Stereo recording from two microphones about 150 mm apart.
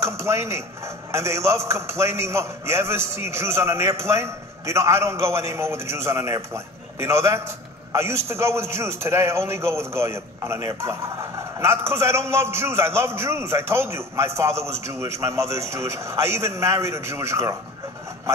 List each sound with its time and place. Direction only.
0.0 s a man's voice: 20° right (ahead or behind)